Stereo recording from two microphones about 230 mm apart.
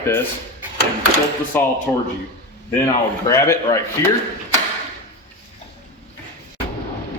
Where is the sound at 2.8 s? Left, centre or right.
Centre.